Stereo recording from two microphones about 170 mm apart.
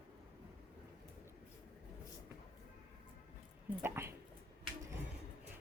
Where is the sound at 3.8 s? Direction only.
15° right (ahead or behind).